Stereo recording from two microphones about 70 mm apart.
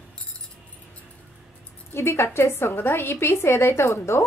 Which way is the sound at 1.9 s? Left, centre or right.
Left.